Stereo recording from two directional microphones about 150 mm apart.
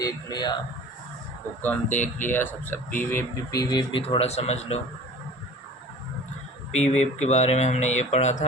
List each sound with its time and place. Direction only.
0.0 s speech: 25° left (ahead or behind)
1.6 s speech: 10° left (ahead or behind); by 4.0 s 30° left (ahead or behind)
4.0 s speech: 40° left (ahead or behind)
6.8 s speech: 50° left (ahead or behind)